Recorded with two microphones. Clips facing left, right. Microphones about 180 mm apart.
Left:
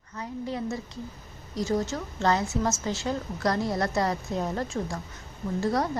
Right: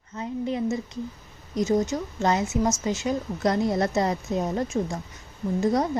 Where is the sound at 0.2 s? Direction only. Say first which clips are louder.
Right 5 dB; 20° right (ahead or behind).